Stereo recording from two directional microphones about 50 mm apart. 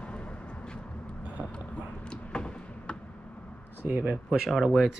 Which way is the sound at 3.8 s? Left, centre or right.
Right.